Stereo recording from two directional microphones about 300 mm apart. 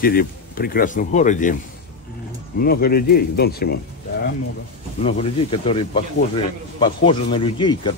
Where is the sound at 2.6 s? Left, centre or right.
Left.